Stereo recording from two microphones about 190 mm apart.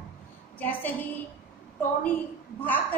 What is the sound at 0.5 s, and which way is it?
Speech, 10° left (ahead or behind).